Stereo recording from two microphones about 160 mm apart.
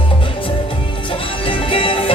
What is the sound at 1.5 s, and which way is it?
Music, 35° left (ahead or behind).